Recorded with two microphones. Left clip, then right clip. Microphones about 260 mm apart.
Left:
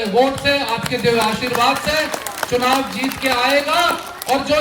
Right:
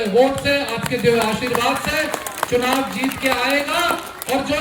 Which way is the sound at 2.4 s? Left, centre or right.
Right.